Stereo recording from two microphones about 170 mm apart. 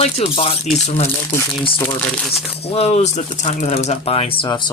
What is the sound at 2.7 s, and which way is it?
Speech, 40° left (ahead or behind).